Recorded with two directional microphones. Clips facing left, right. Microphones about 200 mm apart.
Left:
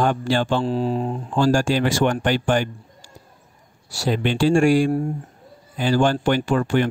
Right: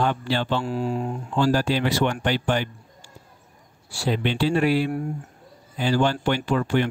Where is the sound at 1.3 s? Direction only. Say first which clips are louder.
Left 3 dB; 45° left (ahead or behind).